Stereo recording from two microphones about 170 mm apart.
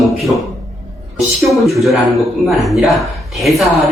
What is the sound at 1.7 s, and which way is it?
Speech, centre (ahead or behind).